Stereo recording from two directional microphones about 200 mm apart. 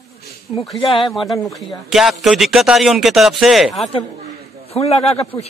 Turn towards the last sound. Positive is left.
turn(degrees=30)  # may be behind; listen again after turning